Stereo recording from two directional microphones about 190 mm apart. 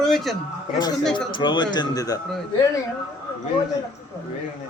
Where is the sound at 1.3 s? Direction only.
25° left (ahead or behind).